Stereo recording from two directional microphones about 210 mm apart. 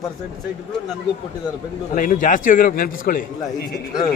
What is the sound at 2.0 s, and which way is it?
A man's voice, 40° left (ahead or behind).